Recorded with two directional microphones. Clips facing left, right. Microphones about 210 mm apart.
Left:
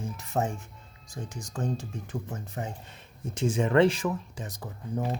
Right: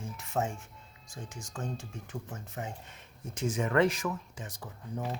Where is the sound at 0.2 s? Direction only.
35° left (ahead or behind).